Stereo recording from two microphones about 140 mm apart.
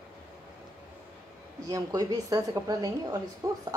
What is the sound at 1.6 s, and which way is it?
Speech, 25° right (ahead or behind).